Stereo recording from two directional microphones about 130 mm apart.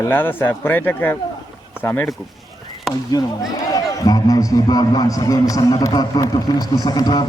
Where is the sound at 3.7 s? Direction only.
30° left (ahead or behind).